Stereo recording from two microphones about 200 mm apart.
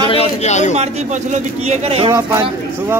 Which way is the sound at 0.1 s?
30° left (ahead or behind).